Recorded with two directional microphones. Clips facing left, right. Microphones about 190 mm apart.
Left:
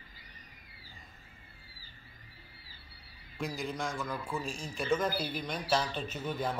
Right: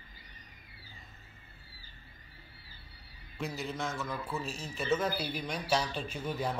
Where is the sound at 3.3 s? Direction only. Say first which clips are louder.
Left 1 dB; 5° right (ahead or behind).